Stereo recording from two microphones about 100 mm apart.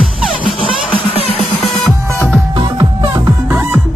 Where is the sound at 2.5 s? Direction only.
50° right (ahead or behind).